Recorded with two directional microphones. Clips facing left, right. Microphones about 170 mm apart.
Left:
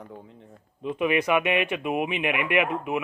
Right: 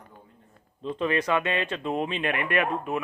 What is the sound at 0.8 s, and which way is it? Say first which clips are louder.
Speech: left 2 dB; 15° left (ahead or behind).